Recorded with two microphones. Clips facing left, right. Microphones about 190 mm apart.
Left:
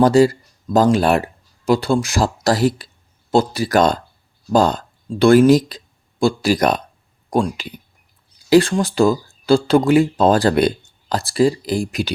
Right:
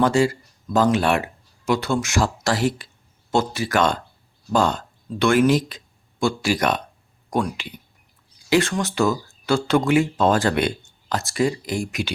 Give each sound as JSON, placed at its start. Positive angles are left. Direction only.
{"t": 0.0, "sound": "speech", "side_deg": 40}